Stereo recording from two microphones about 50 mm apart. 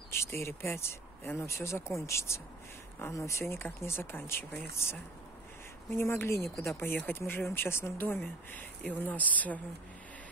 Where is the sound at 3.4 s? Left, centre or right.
Left.